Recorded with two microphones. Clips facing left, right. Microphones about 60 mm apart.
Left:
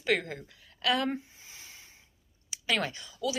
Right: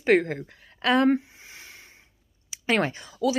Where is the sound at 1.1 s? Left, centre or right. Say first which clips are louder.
Right 12 dB; right.